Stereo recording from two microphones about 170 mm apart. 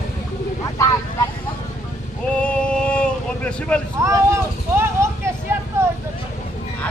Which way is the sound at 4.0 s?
15° right (ahead or behind).